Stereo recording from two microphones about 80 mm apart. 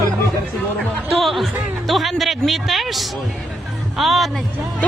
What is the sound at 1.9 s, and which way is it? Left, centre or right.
Speech, centre.